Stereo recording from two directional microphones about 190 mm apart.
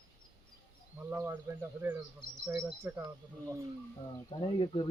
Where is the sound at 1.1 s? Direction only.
15° right (ahead or behind).